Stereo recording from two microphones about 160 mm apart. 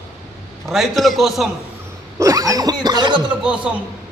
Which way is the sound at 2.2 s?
20° right (ahead or behind).